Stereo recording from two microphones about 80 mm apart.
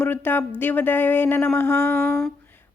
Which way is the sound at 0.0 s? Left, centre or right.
Left.